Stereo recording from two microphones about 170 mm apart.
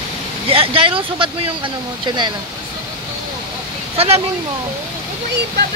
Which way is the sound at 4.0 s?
35° right (ahead or behind).